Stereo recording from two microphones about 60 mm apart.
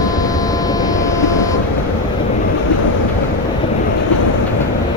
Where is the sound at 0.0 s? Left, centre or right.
Left.